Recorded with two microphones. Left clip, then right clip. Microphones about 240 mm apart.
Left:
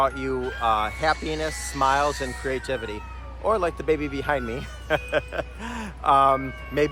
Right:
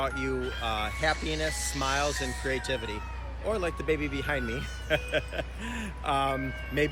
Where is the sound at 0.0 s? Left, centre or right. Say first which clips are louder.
Left 7 dB; centre.